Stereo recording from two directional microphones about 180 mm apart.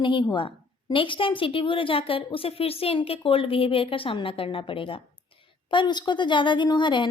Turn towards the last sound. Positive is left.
turn(degrees=25)  # may be behind; listen again after turning